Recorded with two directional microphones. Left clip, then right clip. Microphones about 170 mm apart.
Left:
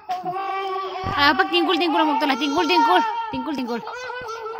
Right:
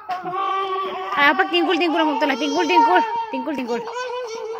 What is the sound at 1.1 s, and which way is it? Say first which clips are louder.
Speech: right 1 dB; 40° left (ahead or behind).